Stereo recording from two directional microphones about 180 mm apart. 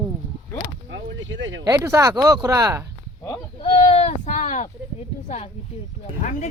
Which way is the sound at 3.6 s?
35° left (ahead or behind).